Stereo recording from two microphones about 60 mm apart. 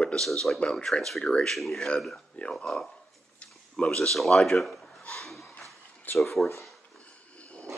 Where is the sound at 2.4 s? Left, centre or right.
Centre.